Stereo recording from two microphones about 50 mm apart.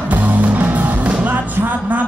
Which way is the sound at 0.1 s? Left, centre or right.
Right.